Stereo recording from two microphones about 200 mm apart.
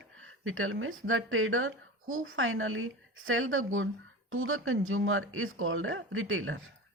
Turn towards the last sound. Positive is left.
turn(degrees=-85)